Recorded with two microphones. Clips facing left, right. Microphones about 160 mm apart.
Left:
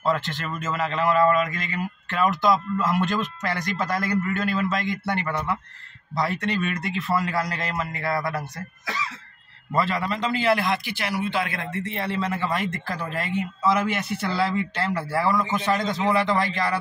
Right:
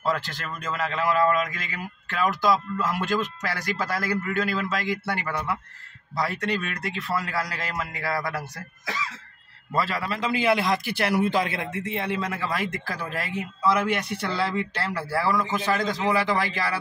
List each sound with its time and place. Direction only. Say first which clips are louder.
0.0 s a man's voice: left 2 dB; centre (ahead or behind)
9.8 s a man's voice: left 2 dB; centre (ahead or behind)
10.9 s speech: right 4 dB; 55° right (ahead or behind)
11.5 s speech: even; 15° right (ahead or behind)
12.4 s a man's voice: left 2 dB; centre (ahead or behind)